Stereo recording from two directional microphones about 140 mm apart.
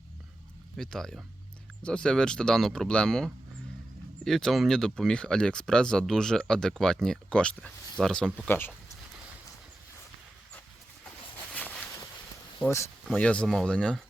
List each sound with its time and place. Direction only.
0.8 s speech: 5° left (ahead or behind)
8.4 s speech: 15° left (ahead or behind)
11.5 s a sound: 10° left (ahead or behind)
12.5 s speech: 20° left (ahead or behind)